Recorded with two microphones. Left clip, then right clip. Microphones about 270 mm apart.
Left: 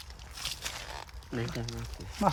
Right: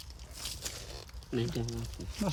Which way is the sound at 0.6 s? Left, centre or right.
Centre.